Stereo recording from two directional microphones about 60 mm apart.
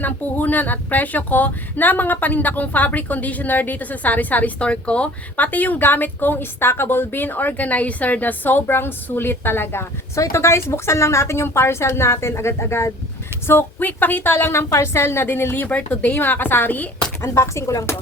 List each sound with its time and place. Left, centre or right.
0.0 s speech: left
10.2 s a woman's voice: left
13.5 s speech: left
16.1 s speech: left
17.2 s a woman's voice: left